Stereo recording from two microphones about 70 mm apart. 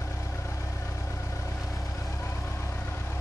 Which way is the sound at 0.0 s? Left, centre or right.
Left.